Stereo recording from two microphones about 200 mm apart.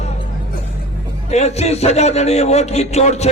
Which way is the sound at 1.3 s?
35° left (ahead or behind).